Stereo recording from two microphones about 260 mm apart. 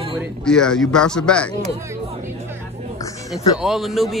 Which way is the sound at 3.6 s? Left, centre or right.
Centre.